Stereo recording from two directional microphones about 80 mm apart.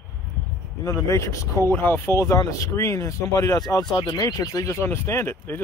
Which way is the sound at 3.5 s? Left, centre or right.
Left.